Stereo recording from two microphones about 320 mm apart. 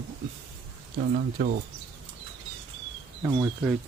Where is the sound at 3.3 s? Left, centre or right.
Centre.